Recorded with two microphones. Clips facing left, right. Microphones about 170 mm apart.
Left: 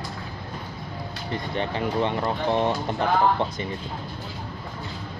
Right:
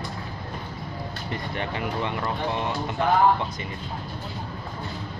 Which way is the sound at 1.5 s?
30° left (ahead or behind).